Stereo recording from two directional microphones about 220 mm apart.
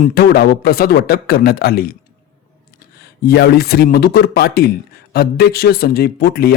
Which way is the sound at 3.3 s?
45° left (ahead or behind).